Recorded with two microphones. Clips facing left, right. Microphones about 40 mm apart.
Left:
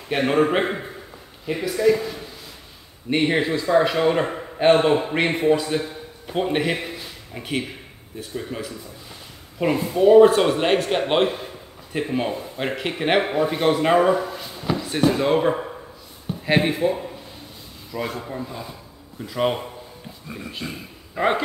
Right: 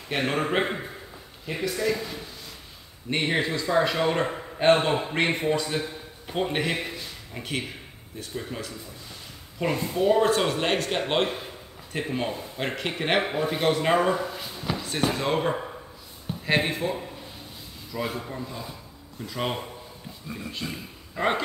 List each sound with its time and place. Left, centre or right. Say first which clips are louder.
0.1 s a man's voice: left 6 dB; centre
3.1 s a man's voice: left 5 dB; centre
18.4 s a man's voice: left 3 dB; centre